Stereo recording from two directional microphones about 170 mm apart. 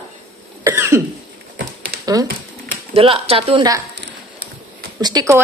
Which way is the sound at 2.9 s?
35° right (ahead or behind).